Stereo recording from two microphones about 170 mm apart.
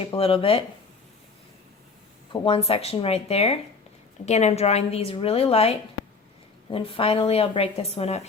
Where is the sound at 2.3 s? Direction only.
35° left (ahead or behind).